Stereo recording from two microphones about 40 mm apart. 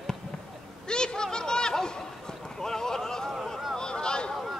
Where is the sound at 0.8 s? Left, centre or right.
Centre.